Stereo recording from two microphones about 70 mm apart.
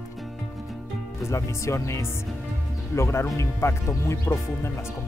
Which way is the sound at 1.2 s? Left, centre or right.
Left.